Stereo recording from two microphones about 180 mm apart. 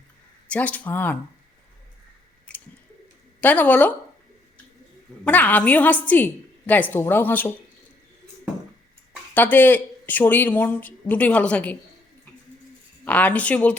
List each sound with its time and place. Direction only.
0.4 s speech: 10° left (ahead or behind)
2.5 s bird: 5° left (ahead or behind)
3.4 s speech: 10° left (ahead or behind)
5.2 s speech: 10° left (ahead or behind)
9.3 s speech: 10° left (ahead or behind)
13.1 s speech: 10° left (ahead or behind)